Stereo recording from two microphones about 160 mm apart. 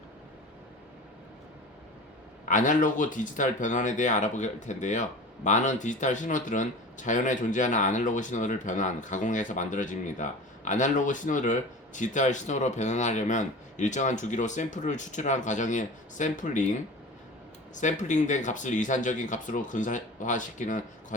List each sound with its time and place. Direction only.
2.5 s speech: 55° left (ahead or behind)
17.7 s speech: 50° left (ahead or behind)